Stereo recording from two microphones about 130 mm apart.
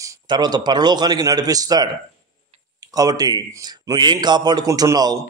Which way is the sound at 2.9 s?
30° right (ahead or behind).